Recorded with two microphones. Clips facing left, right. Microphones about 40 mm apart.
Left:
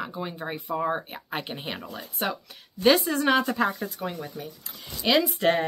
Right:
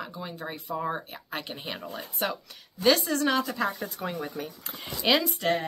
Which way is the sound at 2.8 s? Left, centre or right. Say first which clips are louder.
Left 2 dB; centre.